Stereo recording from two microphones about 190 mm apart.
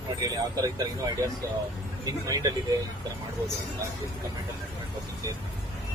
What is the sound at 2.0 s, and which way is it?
Speech, 20° right (ahead or behind).